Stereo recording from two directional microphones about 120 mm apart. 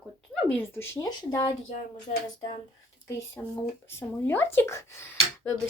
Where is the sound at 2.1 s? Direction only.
90° left.